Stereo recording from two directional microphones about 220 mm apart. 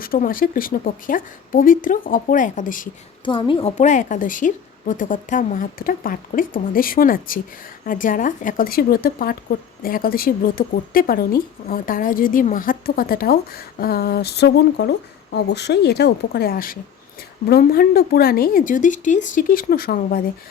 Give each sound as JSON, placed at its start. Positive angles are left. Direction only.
{"t": 0.0, "sound": "a woman's voice", "side_deg": 40}
{"t": 3.2, "sound": "a woman's voice", "side_deg": 20}